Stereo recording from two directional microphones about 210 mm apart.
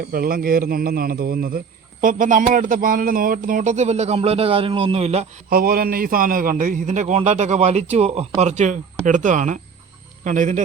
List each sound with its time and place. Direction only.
0.0 s a man's voice: 45° right (ahead or behind); by 5.2 s 30° right (ahead or behind)
5.5 s a man's voice: 45° right (ahead or behind)